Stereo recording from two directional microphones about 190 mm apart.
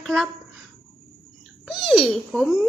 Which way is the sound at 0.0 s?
Centre (ahead or behind).